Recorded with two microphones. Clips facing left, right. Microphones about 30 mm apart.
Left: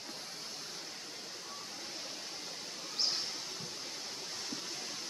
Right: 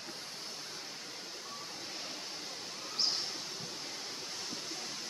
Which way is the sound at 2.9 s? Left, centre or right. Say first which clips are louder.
Right 1 dB; centre.